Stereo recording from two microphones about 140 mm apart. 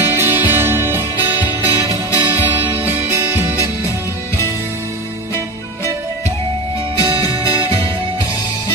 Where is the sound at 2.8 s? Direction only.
15° right (ahead or behind).